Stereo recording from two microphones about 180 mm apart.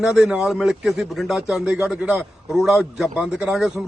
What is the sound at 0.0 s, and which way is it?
A man's voice, centre (ahead or behind).